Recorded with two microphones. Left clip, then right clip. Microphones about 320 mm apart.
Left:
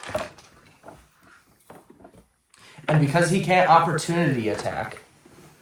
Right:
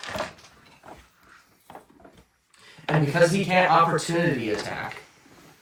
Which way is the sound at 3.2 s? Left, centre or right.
Left.